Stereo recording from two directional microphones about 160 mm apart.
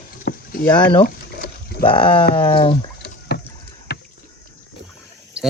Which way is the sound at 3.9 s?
80° left.